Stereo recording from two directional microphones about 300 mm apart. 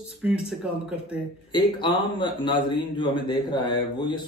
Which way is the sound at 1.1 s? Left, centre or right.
Centre.